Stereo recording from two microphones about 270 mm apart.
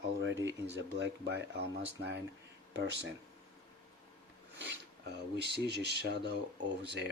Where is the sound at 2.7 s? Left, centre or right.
Right.